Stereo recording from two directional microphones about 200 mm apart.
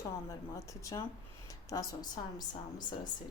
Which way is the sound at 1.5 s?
15° left (ahead or behind).